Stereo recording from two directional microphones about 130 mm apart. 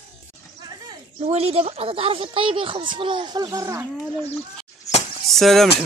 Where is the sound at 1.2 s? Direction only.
50° right (ahead or behind); by 3.8 s 25° right (ahead or behind).